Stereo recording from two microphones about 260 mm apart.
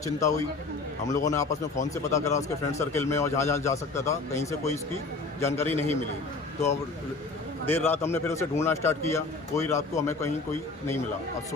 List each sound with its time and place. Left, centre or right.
1.1 s a man's voice: centre
5.6 s a man's voice: right
7.7 s a man's voice: centre